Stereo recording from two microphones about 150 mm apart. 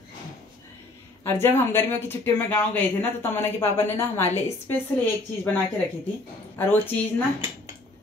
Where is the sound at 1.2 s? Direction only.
15° left (ahead or behind).